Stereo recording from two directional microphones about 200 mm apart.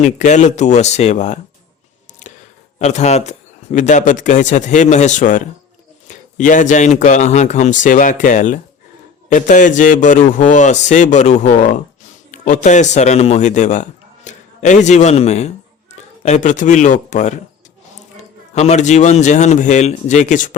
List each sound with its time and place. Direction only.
0.0 s speech: 35° left (ahead or behind)
2.2 s a sound: 35° left (ahead or behind)
2.7 s speech: 35° left (ahead or behind)
18.5 s speech: 35° left (ahead or behind)